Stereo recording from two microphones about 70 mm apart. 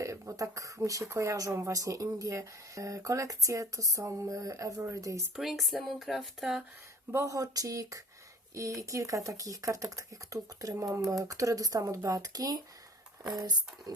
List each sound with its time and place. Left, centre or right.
0.0 s speech: right
5.4 s speech: centre
7.1 s speech: right